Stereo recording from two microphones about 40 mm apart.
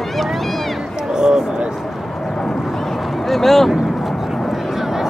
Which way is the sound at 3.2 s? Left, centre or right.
Centre.